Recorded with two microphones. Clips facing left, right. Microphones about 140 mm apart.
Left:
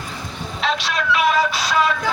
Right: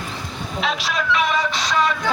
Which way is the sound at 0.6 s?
Centre (ahead or behind).